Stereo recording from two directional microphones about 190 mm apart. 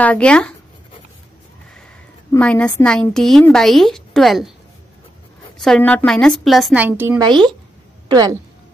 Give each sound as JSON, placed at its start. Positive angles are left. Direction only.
{"t": 0.0, "sound": "a woman's voice", "side_deg": 5}
{"t": 2.3, "sound": "a woman's voice", "side_deg": 5}
{"t": 5.6, "sound": "a woman's voice", "side_deg": 5}
{"t": 7.2, "sound": "speech", "side_deg": -25}